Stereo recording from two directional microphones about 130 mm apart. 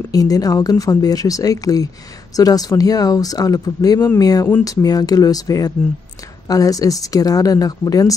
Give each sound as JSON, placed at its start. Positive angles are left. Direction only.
{"t": 0.1, "sound": "speech", "side_deg": 30}